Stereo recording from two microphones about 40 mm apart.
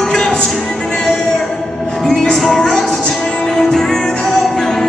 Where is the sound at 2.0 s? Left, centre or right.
Centre.